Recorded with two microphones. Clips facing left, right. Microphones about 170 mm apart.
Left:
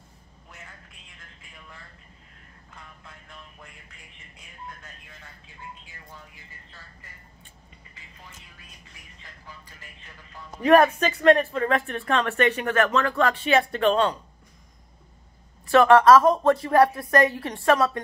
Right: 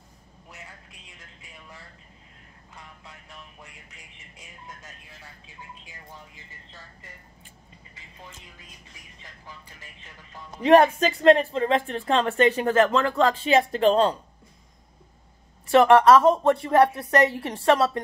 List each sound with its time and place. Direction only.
10.6 s speech: 25° right (ahead or behind)
12.8 s speech: 20° right (ahead or behind)
15.7 s speech: 25° right (ahead or behind)